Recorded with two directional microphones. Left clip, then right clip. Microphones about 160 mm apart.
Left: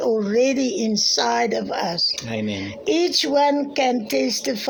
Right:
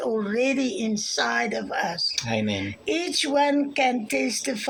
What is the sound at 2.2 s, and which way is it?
Speech, 15° right (ahead or behind).